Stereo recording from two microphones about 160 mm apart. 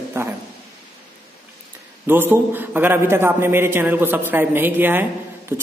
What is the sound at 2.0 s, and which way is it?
A man's voice, 15° right (ahead or behind).